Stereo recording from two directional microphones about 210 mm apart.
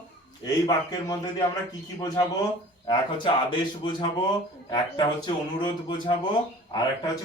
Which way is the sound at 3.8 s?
20° left (ahead or behind).